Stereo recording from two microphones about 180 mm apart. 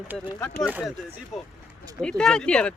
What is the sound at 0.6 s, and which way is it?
Speech, 10° right (ahead or behind).